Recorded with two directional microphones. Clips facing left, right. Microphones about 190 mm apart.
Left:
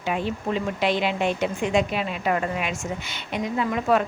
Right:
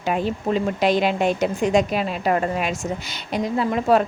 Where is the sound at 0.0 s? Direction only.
40° right (ahead or behind).